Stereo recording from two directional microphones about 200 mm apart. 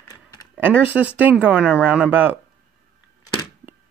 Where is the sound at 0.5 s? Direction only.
10° right (ahead or behind).